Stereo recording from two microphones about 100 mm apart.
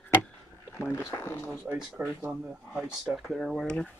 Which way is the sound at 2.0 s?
10° right (ahead or behind).